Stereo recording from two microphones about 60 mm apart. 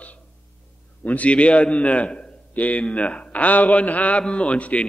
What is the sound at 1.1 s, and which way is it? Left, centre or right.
A man's voice, left.